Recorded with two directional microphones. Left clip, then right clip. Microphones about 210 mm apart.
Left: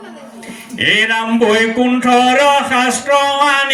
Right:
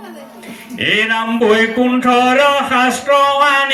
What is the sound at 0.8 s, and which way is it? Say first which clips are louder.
Music: left 2 dB; 20° left (ahead or behind).